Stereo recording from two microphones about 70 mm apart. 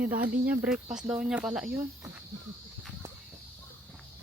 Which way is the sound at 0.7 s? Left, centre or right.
Centre.